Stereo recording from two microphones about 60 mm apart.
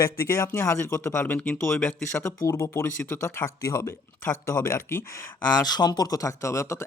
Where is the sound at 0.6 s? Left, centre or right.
Left.